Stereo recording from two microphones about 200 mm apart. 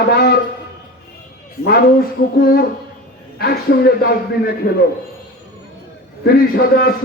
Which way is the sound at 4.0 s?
50° left (ahead or behind).